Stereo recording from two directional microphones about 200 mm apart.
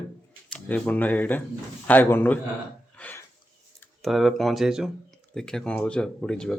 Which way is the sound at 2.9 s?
10° left (ahead or behind).